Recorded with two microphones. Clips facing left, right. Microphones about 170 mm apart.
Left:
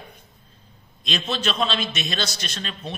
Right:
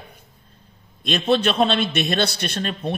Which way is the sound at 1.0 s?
55° right (ahead or behind).